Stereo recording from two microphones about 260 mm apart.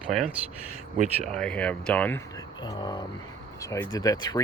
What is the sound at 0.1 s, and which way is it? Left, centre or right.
Speech, centre.